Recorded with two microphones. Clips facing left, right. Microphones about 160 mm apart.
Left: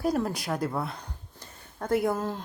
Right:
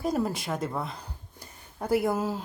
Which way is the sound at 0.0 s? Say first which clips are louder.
Left 1 dB; centre (ahead or behind).